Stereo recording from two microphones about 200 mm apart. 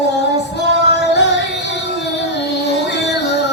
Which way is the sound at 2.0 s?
60° left (ahead or behind).